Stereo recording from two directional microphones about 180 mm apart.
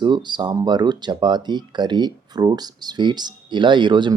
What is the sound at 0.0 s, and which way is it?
Speech, 25° right (ahead or behind).